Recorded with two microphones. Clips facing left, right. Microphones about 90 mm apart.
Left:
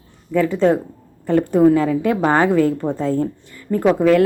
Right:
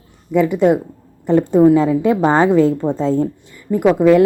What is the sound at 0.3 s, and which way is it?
Speech, 15° right (ahead or behind).